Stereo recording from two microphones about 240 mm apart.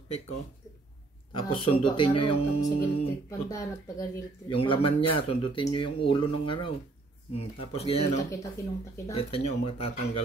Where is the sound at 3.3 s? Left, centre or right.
Centre.